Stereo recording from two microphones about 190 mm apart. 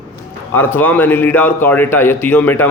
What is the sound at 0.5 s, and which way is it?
A man's voice, 10° left (ahead or behind).